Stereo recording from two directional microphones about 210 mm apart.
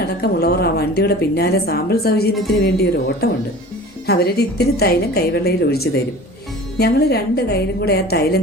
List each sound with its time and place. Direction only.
0.0 s a woman's voice: 50° left (ahead or behind)